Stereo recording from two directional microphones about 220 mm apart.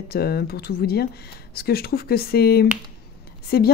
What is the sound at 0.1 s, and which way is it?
Speech, 45° left (ahead or behind).